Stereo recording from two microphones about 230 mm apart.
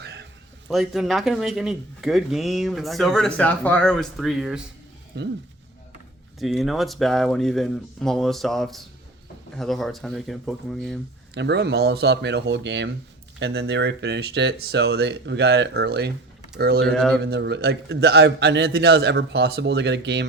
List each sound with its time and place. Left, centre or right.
0.0 s a sound: right
0.7 s speech: centre
5.1 s a man's voice: right
6.4 s speech: centre
11.3 s a man's voice: right
16.8 s speech: centre
17.2 s a man's voice: right